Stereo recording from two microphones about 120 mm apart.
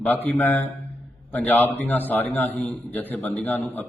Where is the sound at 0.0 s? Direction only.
15° left (ahead or behind).